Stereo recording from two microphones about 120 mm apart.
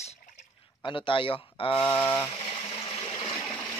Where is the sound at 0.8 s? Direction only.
45° left (ahead or behind).